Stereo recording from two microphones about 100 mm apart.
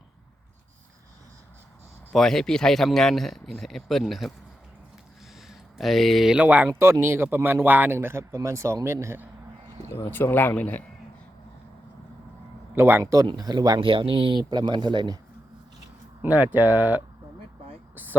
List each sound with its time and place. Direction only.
2.1 s speech: 5° left (ahead or behind)
5.5 s a sound: centre (ahead or behind)
6.3 s speech: 15° right (ahead or behind)
6.7 s speech: 25° right (ahead or behind)
9.9 s speech: 25° left (ahead or behind)
12.7 s speech: 25° right (ahead or behind)
13.2 s speech: 45° right (ahead or behind)
13.8 s speech: 60° right (ahead or behind)
14.5 s speech: 50° right (ahead or behind)
16.2 s speech: 15° right (ahead or behind)